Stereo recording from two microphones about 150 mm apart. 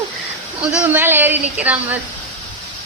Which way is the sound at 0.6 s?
5° right (ahead or behind).